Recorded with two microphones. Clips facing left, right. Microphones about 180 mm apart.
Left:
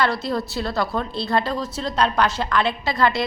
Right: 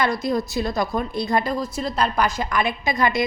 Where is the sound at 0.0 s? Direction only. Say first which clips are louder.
Right 1 dB; 15° right (ahead or behind).